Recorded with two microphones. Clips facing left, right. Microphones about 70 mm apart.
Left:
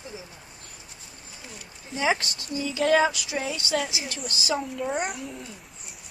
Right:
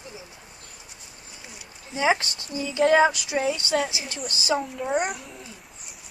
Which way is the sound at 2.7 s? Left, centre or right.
Centre.